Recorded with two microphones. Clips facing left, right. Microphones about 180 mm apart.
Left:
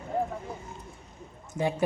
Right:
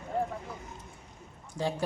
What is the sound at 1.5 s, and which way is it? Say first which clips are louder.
Speech: left 4 dB; 20° left (ahead or behind).